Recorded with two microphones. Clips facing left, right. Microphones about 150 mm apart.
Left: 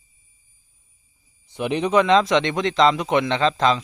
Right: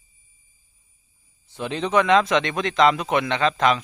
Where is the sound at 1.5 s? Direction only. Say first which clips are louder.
Left 4 dB; 15° left (ahead or behind).